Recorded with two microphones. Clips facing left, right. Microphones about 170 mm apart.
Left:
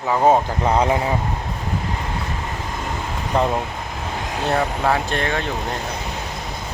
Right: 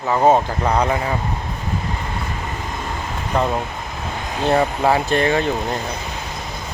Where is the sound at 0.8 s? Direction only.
20° left (ahead or behind).